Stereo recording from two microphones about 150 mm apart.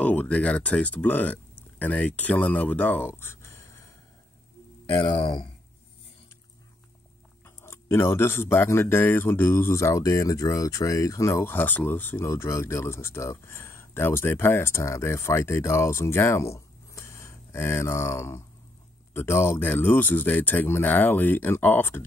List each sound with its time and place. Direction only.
0.0 s speech: 10° left (ahead or behind)
4.9 s speech: 30° left (ahead or behind)
7.4 s speech: 15° left (ahead or behind)